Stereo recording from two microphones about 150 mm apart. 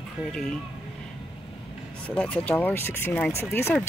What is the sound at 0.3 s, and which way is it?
Speech, 5° left (ahead or behind).